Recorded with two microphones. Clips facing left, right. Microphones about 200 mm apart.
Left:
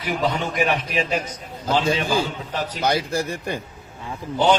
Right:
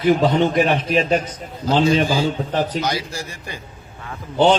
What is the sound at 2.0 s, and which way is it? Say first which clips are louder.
A man's voice: right 3 dB; 55° left (ahead or behind).